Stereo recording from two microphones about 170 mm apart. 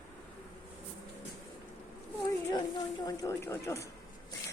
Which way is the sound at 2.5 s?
25° left (ahead or behind).